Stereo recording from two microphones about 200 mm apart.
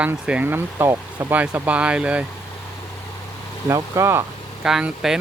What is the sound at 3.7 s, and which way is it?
Speech, 15° right (ahead or behind).